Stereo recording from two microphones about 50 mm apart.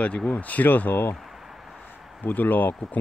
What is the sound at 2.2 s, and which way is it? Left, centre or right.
Speech, left.